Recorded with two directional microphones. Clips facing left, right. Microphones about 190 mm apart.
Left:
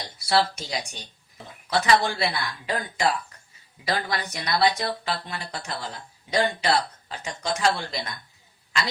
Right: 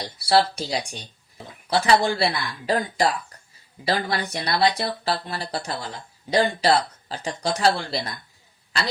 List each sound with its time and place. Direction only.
0.2 s speech: 35° right (ahead or behind)